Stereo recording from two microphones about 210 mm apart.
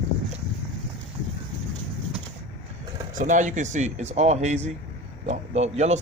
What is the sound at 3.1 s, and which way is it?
Speech, 35° right (ahead or behind).